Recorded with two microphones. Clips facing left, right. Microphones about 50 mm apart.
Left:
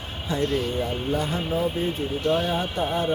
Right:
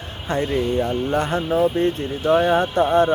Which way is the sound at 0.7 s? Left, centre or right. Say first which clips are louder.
Right 5 dB; right.